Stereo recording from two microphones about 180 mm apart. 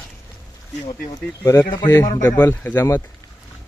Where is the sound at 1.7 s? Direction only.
25° left (ahead or behind).